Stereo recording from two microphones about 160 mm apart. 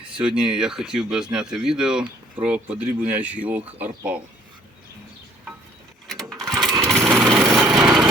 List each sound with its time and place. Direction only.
0.2 s speech: 5° right (ahead or behind)
6.1 s sewing machine: 20° right (ahead or behind)
6.6 s lawn mower: centre (ahead or behind)